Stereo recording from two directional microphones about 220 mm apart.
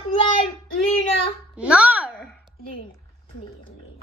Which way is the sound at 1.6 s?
5° right (ahead or behind).